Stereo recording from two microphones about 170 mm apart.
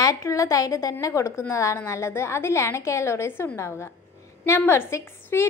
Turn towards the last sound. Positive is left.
turn(degrees=15)  # may be behind; listen again after turning